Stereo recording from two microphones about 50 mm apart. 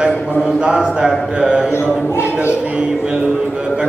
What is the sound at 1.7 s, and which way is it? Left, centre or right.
Speech, left.